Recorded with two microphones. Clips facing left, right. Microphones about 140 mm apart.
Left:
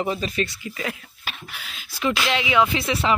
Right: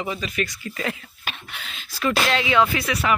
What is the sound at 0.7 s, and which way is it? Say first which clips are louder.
Speech: right 3 dB; 5° left (ahead or behind).